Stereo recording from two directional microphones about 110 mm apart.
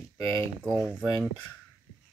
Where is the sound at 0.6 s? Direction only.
10° right (ahead or behind).